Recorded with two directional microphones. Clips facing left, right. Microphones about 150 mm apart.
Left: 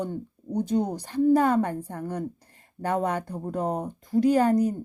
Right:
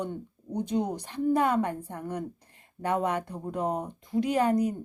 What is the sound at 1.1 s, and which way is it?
Speech, 40° left (ahead or behind).